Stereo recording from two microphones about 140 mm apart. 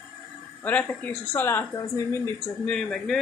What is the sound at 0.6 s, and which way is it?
Speech, 10° left (ahead or behind).